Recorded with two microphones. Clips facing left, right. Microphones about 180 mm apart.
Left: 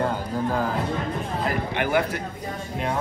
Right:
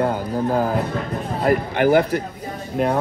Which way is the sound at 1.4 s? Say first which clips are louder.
Right 11 dB; 45° right (ahead or behind).